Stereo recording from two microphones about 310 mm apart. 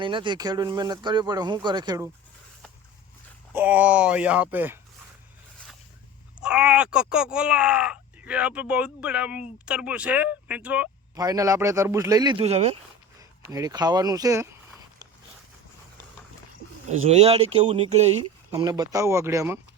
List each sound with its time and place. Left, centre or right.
0.0 s speech: centre
3.5 s speech: centre
6.4 s speech: centre
17.1 s speech: centre